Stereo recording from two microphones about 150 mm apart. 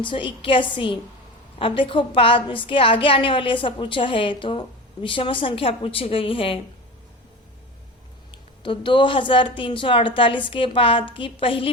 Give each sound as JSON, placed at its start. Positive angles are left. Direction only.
{"t": 0.0, "sound": "a woman's voice", "side_deg": 35}
{"t": 8.3, "sound": "a woman's voice", "side_deg": 35}